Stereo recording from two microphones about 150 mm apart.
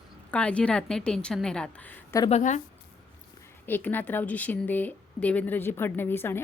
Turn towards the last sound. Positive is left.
turn(degrees=15)  # may be behind; listen again after turning